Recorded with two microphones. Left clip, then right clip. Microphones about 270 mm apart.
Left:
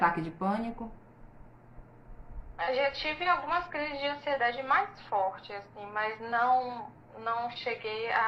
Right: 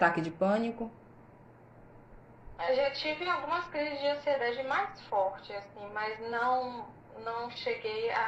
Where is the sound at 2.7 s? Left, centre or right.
Left.